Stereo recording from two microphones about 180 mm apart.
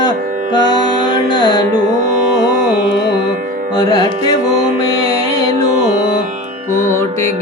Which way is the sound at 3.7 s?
20° left (ahead or behind).